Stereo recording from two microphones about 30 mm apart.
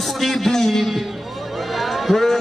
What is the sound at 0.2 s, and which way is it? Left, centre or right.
Speech, centre.